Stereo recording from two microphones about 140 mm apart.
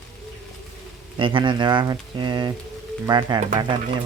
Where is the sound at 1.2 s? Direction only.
35° right (ahead or behind).